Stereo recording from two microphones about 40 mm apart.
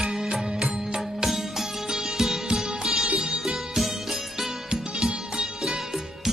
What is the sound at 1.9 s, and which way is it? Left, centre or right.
Music, centre.